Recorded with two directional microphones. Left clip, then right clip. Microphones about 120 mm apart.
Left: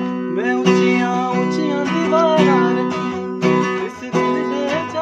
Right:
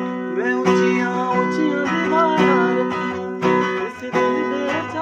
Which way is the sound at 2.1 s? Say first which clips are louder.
Left 3 dB; 15° left (ahead or behind).